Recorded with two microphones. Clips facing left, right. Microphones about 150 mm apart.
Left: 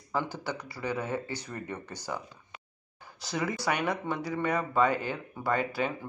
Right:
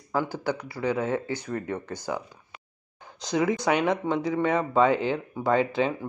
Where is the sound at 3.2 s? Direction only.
20° right (ahead or behind).